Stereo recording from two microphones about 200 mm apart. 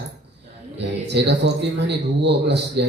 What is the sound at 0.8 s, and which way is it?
A man's voice, 60° right (ahead or behind).